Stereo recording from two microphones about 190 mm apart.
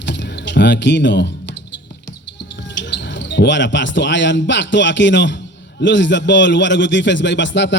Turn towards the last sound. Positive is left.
turn(degrees=70)  # may be behind; listen again after turning